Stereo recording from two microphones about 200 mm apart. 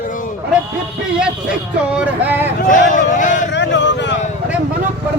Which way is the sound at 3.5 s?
60° left (ahead or behind).